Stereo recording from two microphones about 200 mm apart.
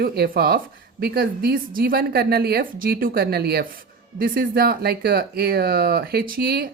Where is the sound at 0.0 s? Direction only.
50° right (ahead or behind).